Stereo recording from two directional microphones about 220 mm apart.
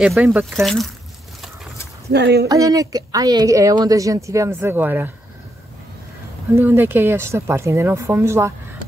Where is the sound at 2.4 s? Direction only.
15° right (ahead or behind).